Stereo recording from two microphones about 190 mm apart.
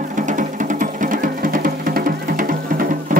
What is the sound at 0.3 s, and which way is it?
Music, 40° right (ahead or behind).